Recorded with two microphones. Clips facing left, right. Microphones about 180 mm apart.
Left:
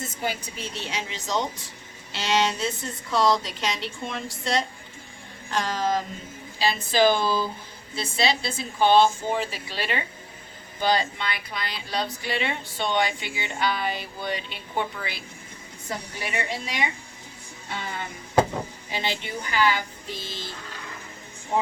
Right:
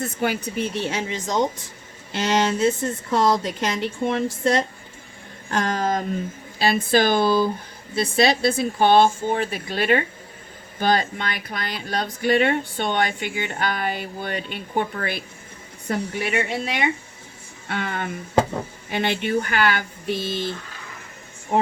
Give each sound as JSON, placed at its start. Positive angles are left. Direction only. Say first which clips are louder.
{"t": 0.0, "sound": "speech", "louder": "right 6 dB", "side_deg": -60}